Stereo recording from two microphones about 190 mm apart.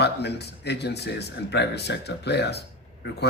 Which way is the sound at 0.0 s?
60° left (ahead or behind).